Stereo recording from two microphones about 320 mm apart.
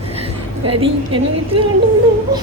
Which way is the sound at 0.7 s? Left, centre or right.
Centre.